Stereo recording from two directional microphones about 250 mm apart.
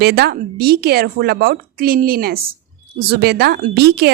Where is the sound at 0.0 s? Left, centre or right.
Right.